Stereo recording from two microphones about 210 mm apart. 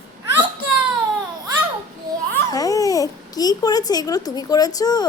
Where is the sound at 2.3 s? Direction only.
15° left (ahead or behind).